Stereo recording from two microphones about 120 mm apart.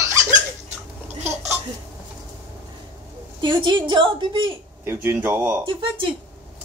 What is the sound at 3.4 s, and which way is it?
A woman's voice, 40° right (ahead or behind).